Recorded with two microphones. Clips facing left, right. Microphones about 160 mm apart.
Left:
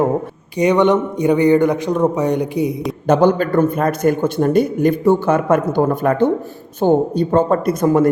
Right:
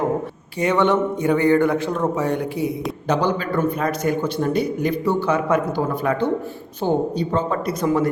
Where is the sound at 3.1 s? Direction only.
50° left (ahead or behind).